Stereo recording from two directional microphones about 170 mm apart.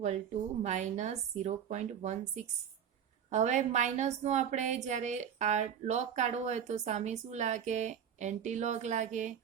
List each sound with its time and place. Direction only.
0.6 s a woman's voice: 45° right (ahead or behind)